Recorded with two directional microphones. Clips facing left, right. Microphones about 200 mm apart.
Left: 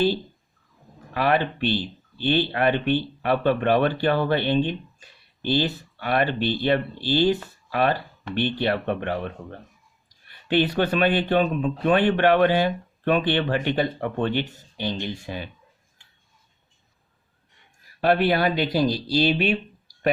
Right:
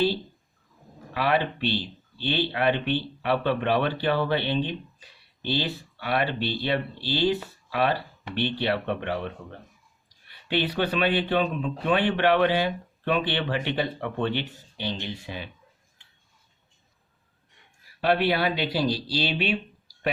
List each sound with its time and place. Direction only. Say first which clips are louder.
1.1 s speech: left 3 dB; 50° left (ahead or behind)
18.0 s speech: left 3 dB; 45° left (ahead or behind)